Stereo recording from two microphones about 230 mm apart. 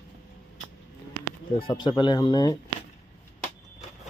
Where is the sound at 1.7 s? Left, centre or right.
Centre.